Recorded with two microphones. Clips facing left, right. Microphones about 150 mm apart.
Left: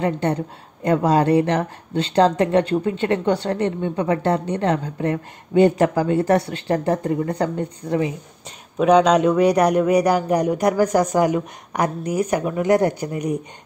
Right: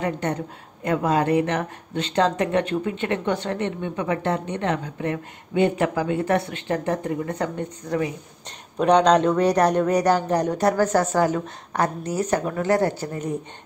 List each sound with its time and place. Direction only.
0.0 s speech: 30° left (ahead or behind)
8.7 s a man's voice: 5° left (ahead or behind)